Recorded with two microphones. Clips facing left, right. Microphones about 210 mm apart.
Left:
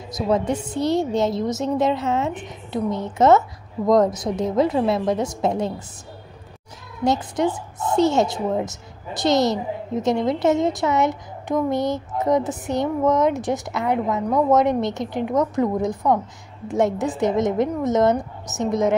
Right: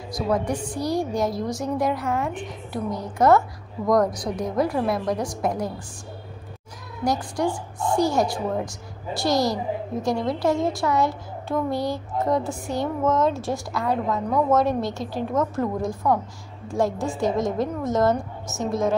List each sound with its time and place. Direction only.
0.1 s a woman's voice: 25° left (ahead or behind)
7.1 s a woman's voice: 20° left (ahead or behind)